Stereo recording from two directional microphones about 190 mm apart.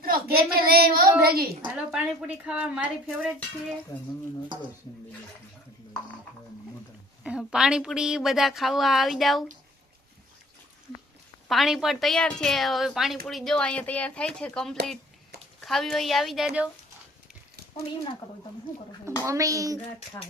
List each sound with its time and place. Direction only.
0.0 s a child's voice: 50° right (ahead or behind)
1.6 s a woman's voice: 5° right (ahead or behind)
7.3 s a woman's voice: 5° right (ahead or behind)
11.4 s a woman's voice: centre (ahead or behind)
19.2 s a child's voice: 15° right (ahead or behind)